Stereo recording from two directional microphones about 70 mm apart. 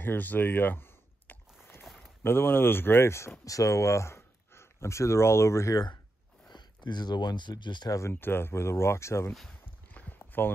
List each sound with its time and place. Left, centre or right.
0.0 s a sound: left
2.2 s speech: left
3.4 s speech: left
6.5 s speech: left
8.1 s speech: left
9.9 s a sound: left